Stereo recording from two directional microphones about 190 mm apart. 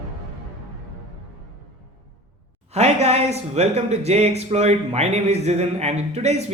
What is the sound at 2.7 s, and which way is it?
Speech, 35° right (ahead or behind).